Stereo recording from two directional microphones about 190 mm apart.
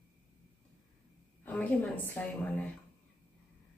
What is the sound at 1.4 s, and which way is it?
A woman's voice, 10° left (ahead or behind).